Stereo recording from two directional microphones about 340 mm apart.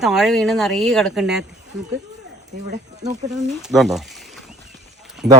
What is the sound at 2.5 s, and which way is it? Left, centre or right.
Speech, right.